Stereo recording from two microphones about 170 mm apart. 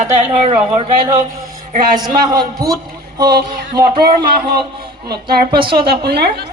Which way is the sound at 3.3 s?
65° right (ahead or behind).